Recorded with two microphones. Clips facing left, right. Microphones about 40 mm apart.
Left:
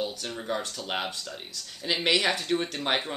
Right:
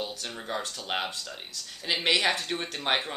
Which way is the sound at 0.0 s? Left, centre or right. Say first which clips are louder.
Left 3 dB; centre.